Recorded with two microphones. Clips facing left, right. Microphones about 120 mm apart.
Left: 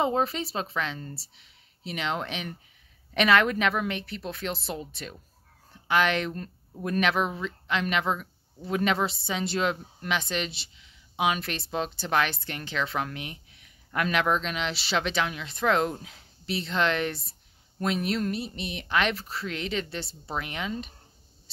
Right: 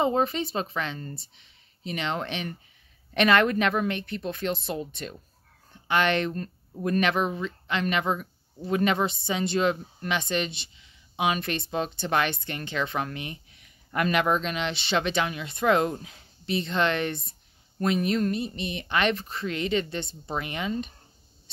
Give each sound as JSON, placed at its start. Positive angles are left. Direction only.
{"t": 0.0, "sound": "speech", "side_deg": 0}